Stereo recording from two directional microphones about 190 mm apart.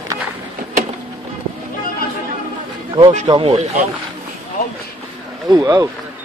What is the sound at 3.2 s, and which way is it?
Speech, 25° right (ahead or behind).